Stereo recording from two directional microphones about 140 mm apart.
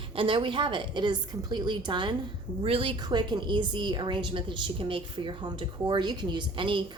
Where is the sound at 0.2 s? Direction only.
40° right (ahead or behind).